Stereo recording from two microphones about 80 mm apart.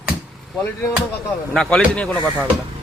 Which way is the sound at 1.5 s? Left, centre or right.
Centre.